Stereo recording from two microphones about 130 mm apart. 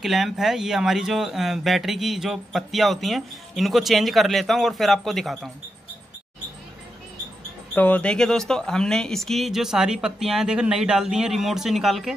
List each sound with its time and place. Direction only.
0.0 s speech: centre (ahead or behind)
7.7 s speech: 10° left (ahead or behind)